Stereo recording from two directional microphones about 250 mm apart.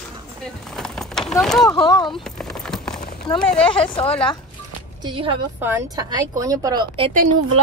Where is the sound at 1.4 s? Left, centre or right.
Centre.